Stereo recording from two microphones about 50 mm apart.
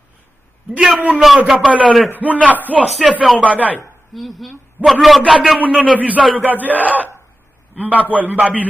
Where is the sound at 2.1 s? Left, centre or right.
Right.